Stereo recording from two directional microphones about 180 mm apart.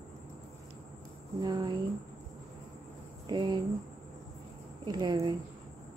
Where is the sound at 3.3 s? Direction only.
25° right (ahead or behind).